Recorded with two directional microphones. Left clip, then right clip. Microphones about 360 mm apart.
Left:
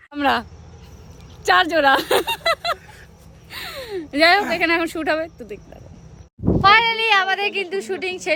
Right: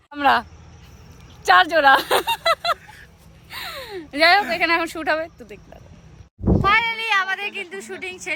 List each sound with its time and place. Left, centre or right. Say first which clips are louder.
0.1 s speech: right 2 dB; centre
1.5 s speech: right 2 dB; centre
3.5 s a sound: left 2 dB; centre
4.5 s a woman's voice: left 1 dB; centre
6.7 s a woman's voice: left 5 dB; centre